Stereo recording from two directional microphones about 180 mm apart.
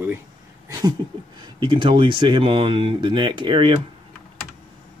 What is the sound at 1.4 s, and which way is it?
Speech, 25° right (ahead or behind).